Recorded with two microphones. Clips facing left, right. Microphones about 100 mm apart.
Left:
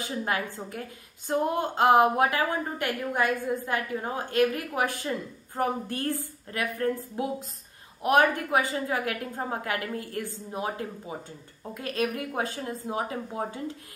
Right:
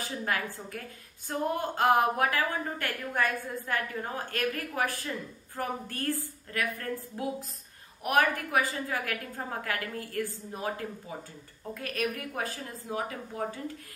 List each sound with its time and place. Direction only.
0.0 s a woman's voice: 20° left (ahead or behind)